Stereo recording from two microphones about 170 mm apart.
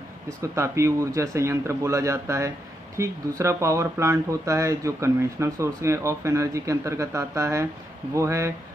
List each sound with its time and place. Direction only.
0.4 s speech: 15° right (ahead or behind)